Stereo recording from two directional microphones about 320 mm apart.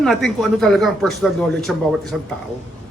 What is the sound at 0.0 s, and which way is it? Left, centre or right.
A man's voice, centre.